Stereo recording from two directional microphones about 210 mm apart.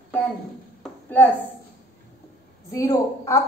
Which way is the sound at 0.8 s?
10° left (ahead or behind).